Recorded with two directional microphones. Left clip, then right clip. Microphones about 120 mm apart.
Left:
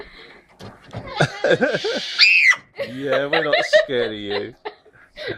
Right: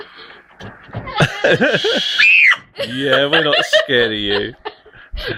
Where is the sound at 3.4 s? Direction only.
40° right (ahead or behind).